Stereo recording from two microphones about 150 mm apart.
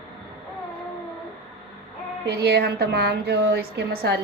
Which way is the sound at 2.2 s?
90° right.